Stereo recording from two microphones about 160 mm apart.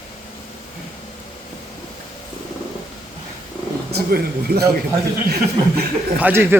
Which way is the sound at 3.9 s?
80° right.